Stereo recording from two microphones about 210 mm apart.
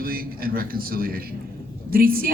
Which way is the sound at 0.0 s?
45° right (ahead or behind).